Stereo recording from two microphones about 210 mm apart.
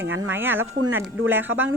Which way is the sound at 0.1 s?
10° right (ahead or behind).